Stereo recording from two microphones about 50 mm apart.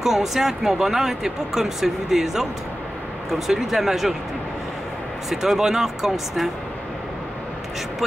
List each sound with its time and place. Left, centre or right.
0.0 s speech: centre
5.3 s speech: centre